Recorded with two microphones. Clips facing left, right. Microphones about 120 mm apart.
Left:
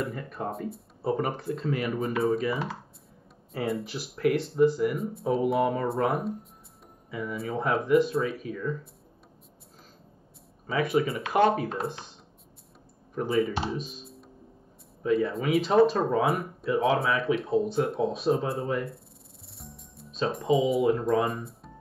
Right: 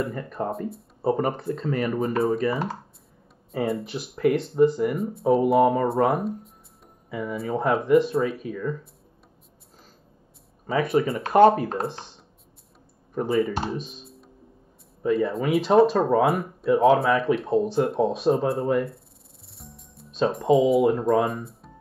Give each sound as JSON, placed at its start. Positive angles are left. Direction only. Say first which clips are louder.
{"t": 0.0, "sound": "speech", "louder": "right 4 dB", "side_deg": 0}
{"t": 10.7, "sound": "speech", "louder": "right 3 dB", "side_deg": 0}
{"t": 11.2, "sound": "speech", "louder": "right 8 dB", "side_deg": -40}
{"t": 13.1, "sound": "speech", "louder": "right 3 dB", "side_deg": 0}